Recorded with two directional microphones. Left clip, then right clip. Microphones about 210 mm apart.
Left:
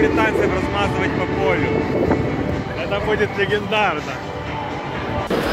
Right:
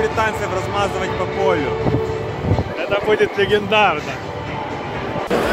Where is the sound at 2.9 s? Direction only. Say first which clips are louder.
Right 3 dB; 40° right (ahead or behind).